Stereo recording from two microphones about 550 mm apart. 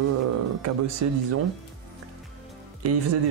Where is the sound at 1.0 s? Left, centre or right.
Right.